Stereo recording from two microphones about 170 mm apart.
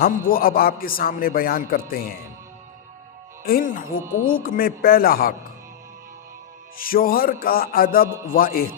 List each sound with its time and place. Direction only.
0.0 s a man's voice: 60° left (ahead or behind)
3.4 s a man's voice: 55° left (ahead or behind)
6.7 s a man's voice: 60° left (ahead or behind)